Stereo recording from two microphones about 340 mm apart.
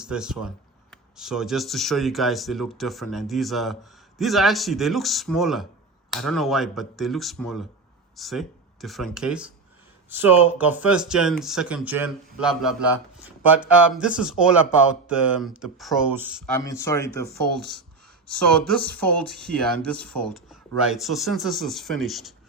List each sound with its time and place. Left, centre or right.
0.0 s speech: centre
16.6 s speech: centre
17.6 s speech: right
18.4 s speech: centre